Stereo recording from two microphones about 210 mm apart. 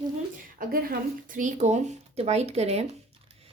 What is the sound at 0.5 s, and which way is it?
A woman's voice, 40° right (ahead or behind).